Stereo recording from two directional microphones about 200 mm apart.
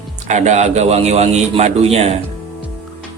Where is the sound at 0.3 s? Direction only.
35° right (ahead or behind).